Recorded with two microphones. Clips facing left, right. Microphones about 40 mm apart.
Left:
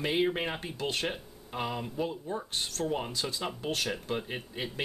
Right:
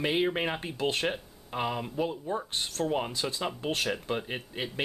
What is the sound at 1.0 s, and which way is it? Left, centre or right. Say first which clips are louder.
Speech: right 3 dB; centre.